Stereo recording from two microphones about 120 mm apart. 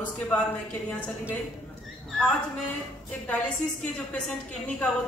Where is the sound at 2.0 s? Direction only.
5° left (ahead or behind).